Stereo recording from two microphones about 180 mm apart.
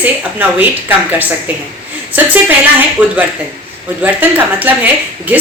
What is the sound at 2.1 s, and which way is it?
A woman's voice, 10° right (ahead or behind).